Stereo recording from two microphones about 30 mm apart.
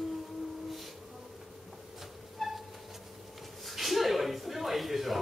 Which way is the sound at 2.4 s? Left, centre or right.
Centre.